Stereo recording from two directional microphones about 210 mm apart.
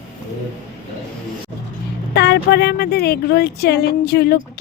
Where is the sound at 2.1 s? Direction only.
55° left (ahead or behind).